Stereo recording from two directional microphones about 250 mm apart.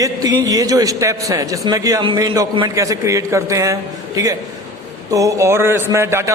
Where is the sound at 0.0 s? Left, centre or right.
Centre.